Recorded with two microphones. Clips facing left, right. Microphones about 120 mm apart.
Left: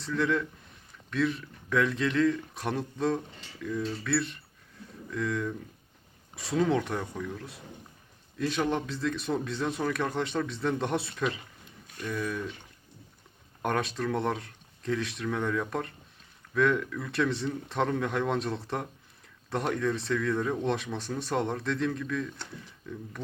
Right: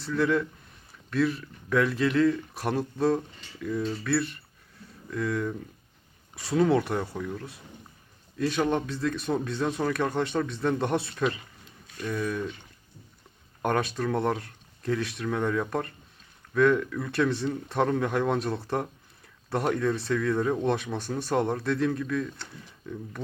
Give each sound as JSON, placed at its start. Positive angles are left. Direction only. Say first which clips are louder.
{"t": 0.0, "sound": "speech", "louder": "right 3 dB", "side_deg": -5}
{"t": 13.6, "sound": "speech", "louder": "right 3 dB", "side_deg": 0}